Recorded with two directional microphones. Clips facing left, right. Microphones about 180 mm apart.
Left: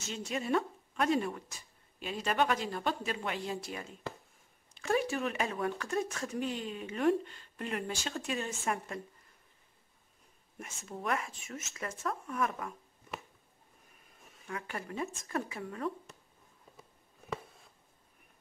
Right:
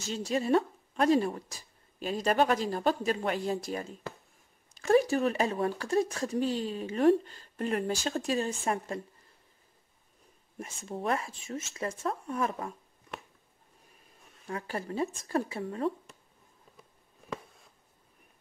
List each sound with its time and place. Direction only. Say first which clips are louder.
0.0 s speech: right 6 dB; 35° right (ahead or behind)
10.6 s speech: right 5 dB; 30° right (ahead or behind)
14.5 s speech: right 5 dB; 30° right (ahead or behind)